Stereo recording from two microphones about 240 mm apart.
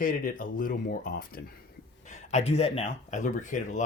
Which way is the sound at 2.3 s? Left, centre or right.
Left.